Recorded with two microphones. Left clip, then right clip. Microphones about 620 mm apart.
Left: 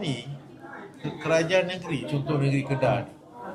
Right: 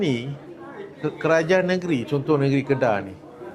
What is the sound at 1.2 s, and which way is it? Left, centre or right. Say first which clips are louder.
A man's voice: right 4 dB; right.